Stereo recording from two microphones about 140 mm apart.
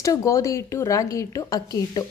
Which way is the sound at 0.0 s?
25° left (ahead or behind).